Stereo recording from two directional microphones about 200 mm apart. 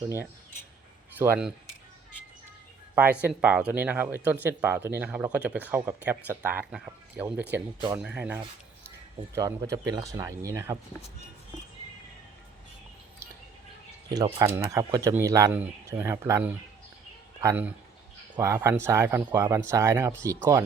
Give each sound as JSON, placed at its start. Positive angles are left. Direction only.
{"t": 1.2, "sound": "speech", "side_deg": -5}
{"t": 3.2, "sound": "speech", "side_deg": -5}
{"t": 14.1, "sound": "speech", "side_deg": -20}